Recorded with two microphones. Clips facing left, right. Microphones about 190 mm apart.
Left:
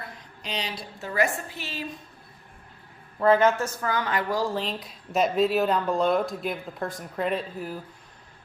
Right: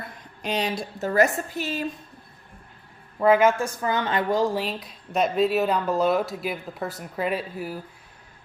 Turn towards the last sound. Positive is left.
turn(degrees=-5)  # may be behind; listen again after turning